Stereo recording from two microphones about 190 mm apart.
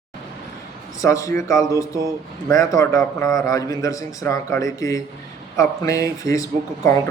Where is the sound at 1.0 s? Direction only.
15° left (ahead or behind).